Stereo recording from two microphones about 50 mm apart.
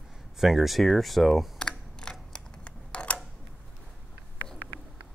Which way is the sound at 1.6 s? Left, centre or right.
Centre.